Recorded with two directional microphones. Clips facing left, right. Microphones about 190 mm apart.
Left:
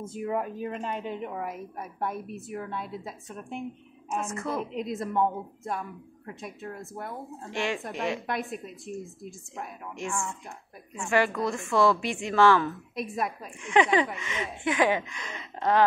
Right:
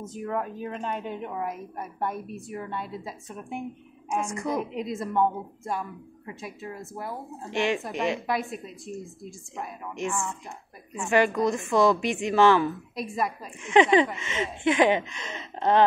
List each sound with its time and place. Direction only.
0.0 s a woman's voice: 10° left (ahead or behind)
4.1 s a woman's voice: 15° right (ahead or behind)
4.7 s a woman's voice: centre (ahead or behind)
7.4 s a woman's voice: 20° right (ahead or behind)
8.3 s a woman's voice: centre (ahead or behind)
10.0 s a woman's voice: 20° right (ahead or behind)
12.9 s a woman's voice: centre (ahead or behind)
13.6 s a woman's voice: 20° right (ahead or behind)